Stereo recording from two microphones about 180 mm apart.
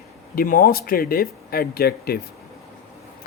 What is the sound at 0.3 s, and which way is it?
Speech, 50° left (ahead or behind).